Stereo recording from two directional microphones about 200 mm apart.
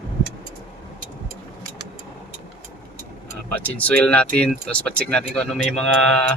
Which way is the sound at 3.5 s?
10° left (ahead or behind).